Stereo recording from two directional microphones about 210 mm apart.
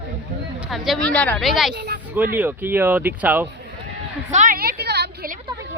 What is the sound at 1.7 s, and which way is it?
Speech, 55° right (ahead or behind).